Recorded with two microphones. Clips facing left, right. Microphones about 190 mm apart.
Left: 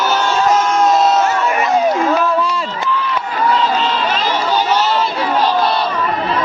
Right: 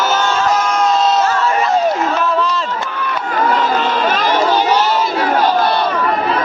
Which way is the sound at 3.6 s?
50° right (ahead or behind).